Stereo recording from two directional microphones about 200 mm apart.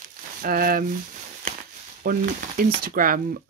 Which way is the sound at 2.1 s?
45° right (ahead or behind).